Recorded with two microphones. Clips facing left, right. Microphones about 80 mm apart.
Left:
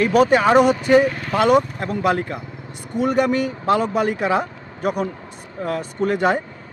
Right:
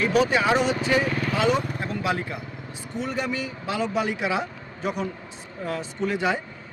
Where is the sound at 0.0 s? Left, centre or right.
Left.